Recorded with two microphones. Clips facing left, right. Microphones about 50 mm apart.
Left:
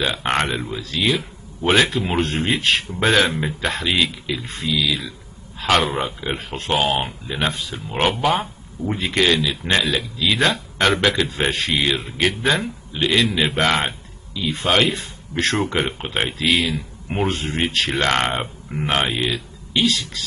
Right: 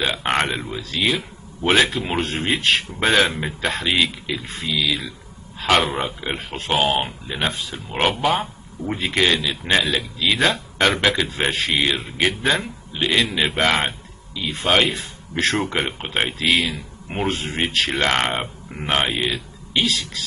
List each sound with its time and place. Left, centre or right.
0.0 s speech: centre
19.0 s speech: centre
19.3 s speech: centre